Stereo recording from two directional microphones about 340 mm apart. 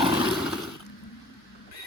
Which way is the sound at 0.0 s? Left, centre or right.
Centre.